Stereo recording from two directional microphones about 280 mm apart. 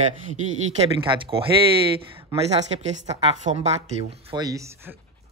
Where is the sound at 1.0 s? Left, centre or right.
Centre.